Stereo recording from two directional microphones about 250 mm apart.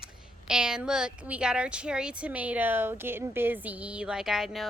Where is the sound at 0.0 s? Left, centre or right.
Centre.